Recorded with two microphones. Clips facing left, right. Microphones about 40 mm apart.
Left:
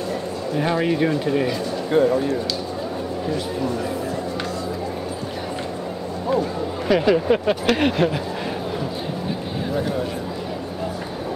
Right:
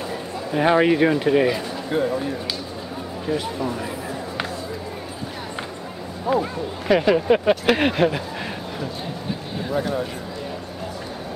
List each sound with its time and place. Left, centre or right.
0.5 s speech: right
1.9 s speech: centre
3.3 s speech: centre
6.3 s speech: centre
9.7 s speech: centre